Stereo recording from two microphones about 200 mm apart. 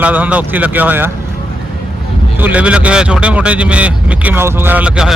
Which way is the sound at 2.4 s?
10° right (ahead or behind).